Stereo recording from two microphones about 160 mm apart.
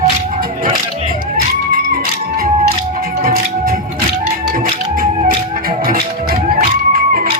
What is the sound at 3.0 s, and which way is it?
Music, 65° right (ahead or behind).